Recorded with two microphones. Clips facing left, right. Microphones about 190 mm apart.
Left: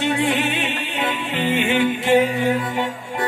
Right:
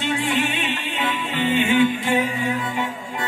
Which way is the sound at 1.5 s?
70° left (ahead or behind).